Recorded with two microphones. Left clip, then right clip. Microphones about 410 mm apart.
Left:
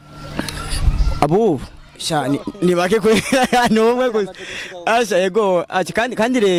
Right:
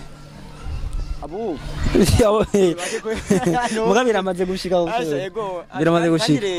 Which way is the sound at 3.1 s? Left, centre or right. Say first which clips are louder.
Left 6 dB; left.